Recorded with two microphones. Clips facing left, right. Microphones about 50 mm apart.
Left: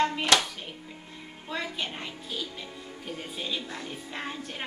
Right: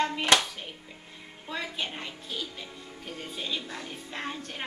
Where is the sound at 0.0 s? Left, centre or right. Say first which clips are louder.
Left 2 dB; centre.